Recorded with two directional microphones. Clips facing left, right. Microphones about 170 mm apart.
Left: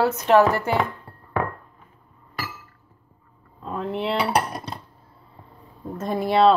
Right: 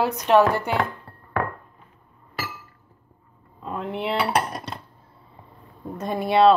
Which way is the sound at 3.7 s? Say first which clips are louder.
Left 1 dB; centre (ahead or behind).